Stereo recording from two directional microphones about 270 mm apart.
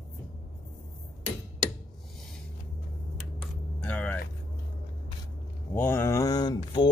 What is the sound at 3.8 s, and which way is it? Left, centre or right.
Vehicle, centre.